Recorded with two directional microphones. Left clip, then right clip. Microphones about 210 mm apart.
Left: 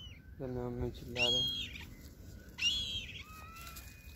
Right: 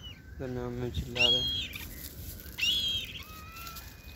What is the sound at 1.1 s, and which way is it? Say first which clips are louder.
Speech: right 6 dB; 15° left (ahead or behind).